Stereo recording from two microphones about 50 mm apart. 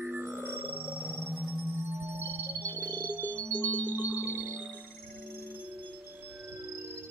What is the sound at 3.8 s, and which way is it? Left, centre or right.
Music, right.